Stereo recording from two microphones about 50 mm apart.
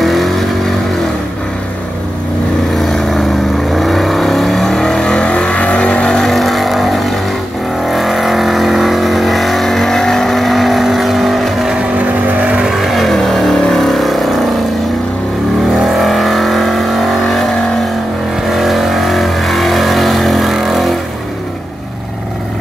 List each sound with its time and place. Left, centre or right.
0.0 s vehicle: centre
2.8 s vehicle: centre; by 6.2 s left
6.2 s vehicle: centre
12.0 s vehicle: right
12.6 s vehicle: centre
15.8 s vehicle: centre